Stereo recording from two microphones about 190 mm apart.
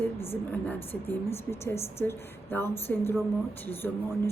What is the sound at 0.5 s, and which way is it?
A woman's voice, 10° left (ahead or behind).